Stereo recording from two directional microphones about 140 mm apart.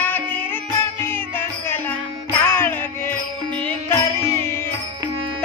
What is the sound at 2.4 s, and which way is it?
Music, 15° left (ahead or behind).